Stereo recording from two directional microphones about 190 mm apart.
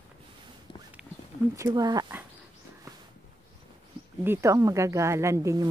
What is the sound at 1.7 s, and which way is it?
Speech, 20° right (ahead or behind).